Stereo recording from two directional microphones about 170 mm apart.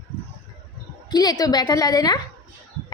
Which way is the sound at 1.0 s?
25° left (ahead or behind).